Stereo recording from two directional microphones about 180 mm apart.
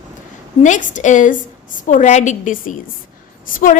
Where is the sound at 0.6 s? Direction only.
45° left (ahead or behind).